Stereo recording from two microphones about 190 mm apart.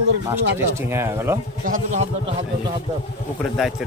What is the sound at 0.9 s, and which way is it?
Speech, 15° right (ahead or behind).